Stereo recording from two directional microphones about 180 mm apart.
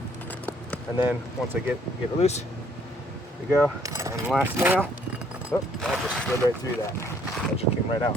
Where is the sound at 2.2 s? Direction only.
35° left (ahead or behind).